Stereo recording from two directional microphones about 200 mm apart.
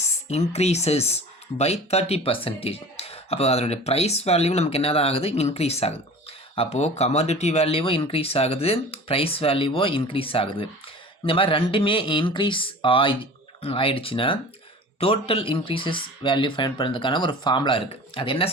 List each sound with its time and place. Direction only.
0.3 s speech: 30° left (ahead or behind)